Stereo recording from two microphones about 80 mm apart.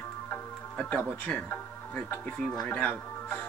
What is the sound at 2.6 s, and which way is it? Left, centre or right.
Speech, centre.